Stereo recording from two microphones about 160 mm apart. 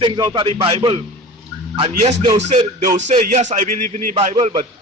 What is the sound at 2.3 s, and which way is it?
Speech, 45° right (ahead or behind).